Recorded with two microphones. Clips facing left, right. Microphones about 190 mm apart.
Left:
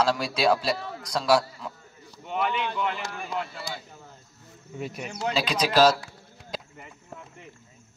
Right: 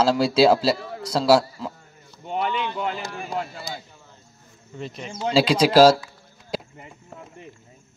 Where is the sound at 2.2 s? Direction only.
35° right (ahead or behind).